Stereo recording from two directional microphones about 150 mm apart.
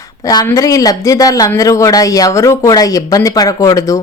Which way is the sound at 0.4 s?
20° left (ahead or behind).